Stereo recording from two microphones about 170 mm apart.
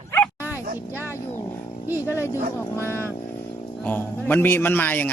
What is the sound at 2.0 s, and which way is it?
Speech, 15° left (ahead or behind).